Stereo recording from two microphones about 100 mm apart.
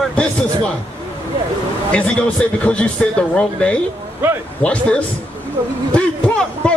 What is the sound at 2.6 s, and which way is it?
A man's voice, 10° left (ahead or behind).